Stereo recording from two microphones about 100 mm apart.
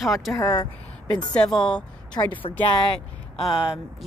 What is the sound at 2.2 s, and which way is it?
Speech, 40° left (ahead or behind).